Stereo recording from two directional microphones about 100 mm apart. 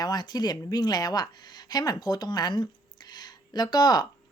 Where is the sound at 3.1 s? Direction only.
45° left (ahead or behind).